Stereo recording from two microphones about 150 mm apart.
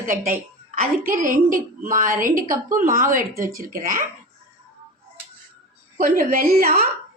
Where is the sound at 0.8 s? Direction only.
60° right (ahead or behind).